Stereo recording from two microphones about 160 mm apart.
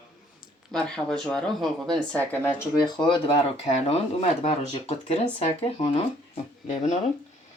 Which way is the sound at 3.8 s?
40° left (ahead or behind).